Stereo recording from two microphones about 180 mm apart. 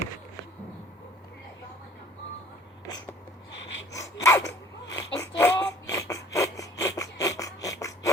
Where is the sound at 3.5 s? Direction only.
85° left.